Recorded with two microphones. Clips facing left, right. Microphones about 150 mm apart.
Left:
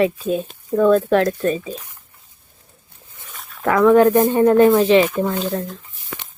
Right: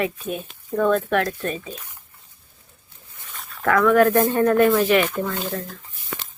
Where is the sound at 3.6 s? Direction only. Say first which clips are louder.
Left 4 dB; 30° left (ahead or behind).